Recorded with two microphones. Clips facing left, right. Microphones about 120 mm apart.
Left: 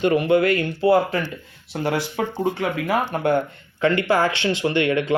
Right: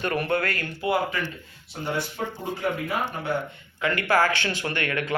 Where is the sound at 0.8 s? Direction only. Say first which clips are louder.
Left 6 dB; 35° left (ahead or behind).